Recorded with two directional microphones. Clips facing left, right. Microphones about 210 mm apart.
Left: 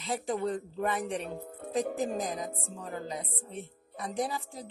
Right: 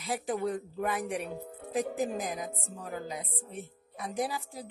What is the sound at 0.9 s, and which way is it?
Speech, 15° right (ahead or behind).